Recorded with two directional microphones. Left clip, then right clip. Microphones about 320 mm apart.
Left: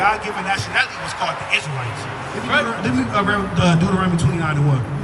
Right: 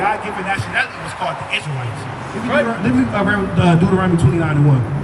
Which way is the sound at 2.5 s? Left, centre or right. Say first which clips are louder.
Right 2 dB; centre.